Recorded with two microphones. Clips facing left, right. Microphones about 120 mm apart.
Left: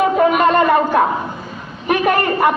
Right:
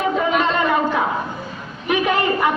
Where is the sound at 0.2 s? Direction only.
55° left (ahead or behind).